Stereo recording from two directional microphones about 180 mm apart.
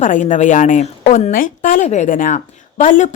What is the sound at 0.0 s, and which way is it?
A woman's voice, 45° left (ahead or behind).